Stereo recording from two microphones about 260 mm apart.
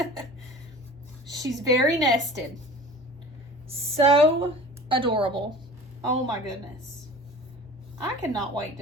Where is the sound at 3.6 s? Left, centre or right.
Right.